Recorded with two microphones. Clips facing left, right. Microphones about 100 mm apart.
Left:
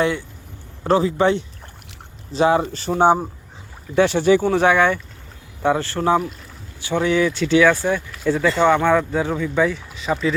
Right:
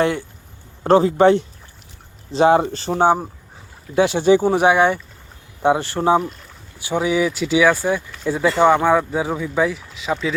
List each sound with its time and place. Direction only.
0.0 s speech: 35° right (ahead or behind)
2.9 s speech: 10° right (ahead or behind)